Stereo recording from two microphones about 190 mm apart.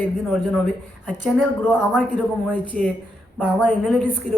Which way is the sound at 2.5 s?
10° left (ahead or behind).